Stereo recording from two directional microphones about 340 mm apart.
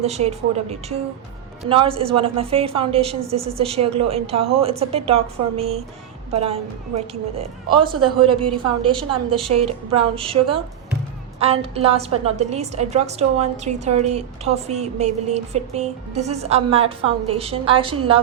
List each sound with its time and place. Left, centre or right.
0.0 s a woman's voice: centre
9.5 s a woman's voice: right
10.0 s a woman's voice: centre